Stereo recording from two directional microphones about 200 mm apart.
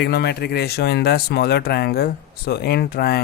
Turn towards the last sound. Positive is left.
turn(degrees=50)  # may be behind; listen again after turning